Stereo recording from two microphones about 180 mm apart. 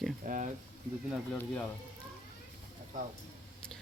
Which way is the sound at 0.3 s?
45° right (ahead or behind).